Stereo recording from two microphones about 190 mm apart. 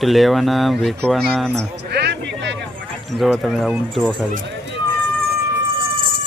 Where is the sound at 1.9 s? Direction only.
60° right (ahead or behind).